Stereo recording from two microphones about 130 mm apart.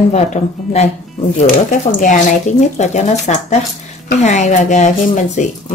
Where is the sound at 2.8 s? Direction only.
60° left (ahead or behind).